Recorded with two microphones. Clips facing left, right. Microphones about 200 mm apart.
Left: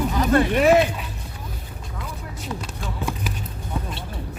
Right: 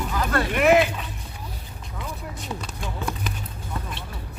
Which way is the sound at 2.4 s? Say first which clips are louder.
Left 2 dB; 5° left (ahead or behind).